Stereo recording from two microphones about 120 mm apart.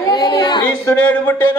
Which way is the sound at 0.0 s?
35° left (ahead or behind).